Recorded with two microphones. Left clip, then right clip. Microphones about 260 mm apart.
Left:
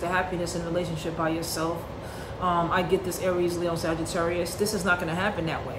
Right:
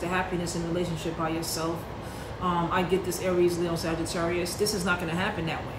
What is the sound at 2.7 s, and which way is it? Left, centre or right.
Speech, centre.